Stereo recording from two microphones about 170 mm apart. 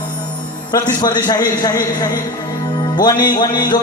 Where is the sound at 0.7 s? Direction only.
25° left (ahead or behind).